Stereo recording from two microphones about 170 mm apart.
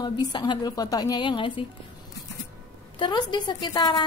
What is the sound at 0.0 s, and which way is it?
A woman's voice, 25° left (ahead or behind).